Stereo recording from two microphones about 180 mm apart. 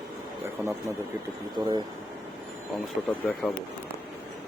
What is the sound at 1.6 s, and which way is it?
Speech, 25° right (ahead or behind).